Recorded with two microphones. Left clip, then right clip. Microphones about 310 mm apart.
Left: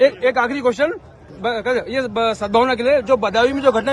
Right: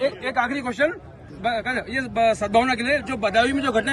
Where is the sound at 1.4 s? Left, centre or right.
Centre.